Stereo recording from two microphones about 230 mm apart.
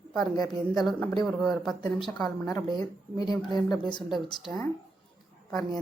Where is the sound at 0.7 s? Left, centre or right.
Centre.